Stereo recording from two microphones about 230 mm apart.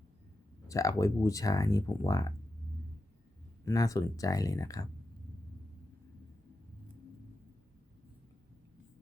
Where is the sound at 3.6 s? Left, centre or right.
Centre.